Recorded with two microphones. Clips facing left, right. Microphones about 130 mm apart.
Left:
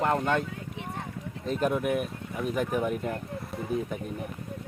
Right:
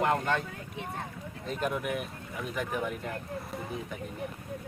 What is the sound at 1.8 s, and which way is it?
Speech, 45° left (ahead or behind).